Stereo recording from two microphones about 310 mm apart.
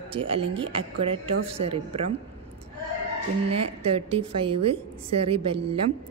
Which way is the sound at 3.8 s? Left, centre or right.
Centre.